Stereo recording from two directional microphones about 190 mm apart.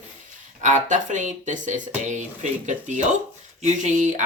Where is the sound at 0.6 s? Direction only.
40° right (ahead or behind).